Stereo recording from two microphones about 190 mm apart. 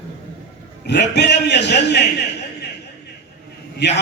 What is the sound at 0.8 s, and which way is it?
A man's voice, 65° left (ahead or behind).